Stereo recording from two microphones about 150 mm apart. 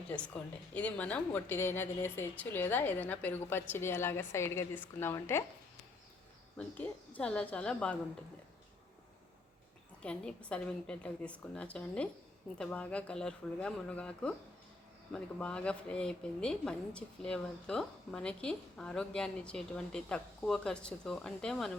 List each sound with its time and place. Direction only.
0.7 s a woman's voice: 10° left (ahead or behind)
6.6 s a woman's voice: 10° left (ahead or behind)
10.0 s a woman's voice: 5° left (ahead or behind)